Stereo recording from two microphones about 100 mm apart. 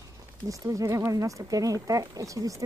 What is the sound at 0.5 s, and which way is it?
Speech, 35° right (ahead or behind).